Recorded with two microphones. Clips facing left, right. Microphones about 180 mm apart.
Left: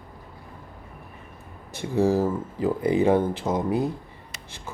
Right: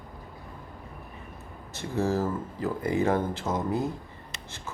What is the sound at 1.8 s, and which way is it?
Speech, 15° left (ahead or behind).